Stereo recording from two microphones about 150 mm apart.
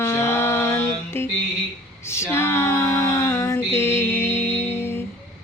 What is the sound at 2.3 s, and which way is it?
Female singing, 15° left (ahead or behind).